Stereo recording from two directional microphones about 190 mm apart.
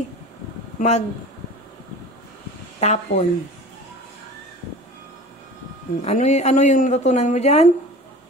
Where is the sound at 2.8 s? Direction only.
35° left (ahead or behind).